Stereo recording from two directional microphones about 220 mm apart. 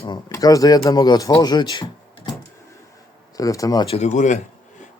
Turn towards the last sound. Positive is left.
turn(degrees=35)  # may be behind; listen again after turning